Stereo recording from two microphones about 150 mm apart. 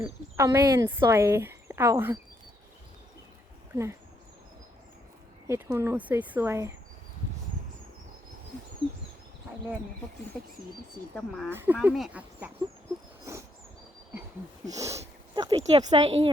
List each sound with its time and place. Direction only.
0.0 s speech: 20° right (ahead or behind)
3.7 s speech: 20° right (ahead or behind)
5.5 s speech: 15° right (ahead or behind)
8.8 s a sound: 30° left (ahead or behind)
11.3 s speech: centre (ahead or behind)
11.5 s speech: 15° right (ahead or behind)
14.7 s speech: 20° right (ahead or behind)
15.7 s speech: 40° right (ahead or behind)